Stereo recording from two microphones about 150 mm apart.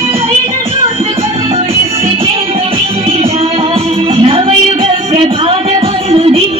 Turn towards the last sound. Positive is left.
turn(degrees=-40)  # may be behind; listen again after turning